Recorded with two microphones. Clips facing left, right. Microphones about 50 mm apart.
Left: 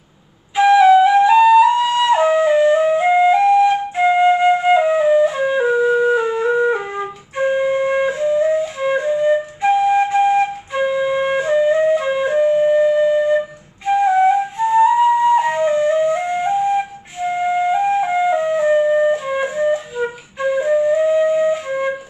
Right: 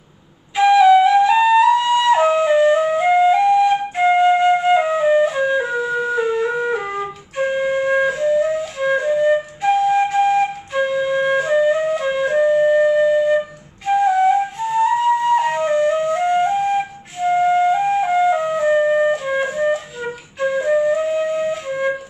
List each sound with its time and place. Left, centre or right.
0.6 s flute: centre
9.1 s flute: centre
9.6 s flute: centre
14.0 s flute: centre
18.9 s flute: centre
19.1 s flute: centre